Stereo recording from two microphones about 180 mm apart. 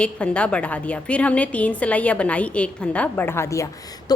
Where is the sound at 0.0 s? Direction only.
5° left (ahead or behind).